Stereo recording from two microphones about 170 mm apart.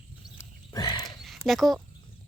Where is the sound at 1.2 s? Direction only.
Centre (ahead or behind).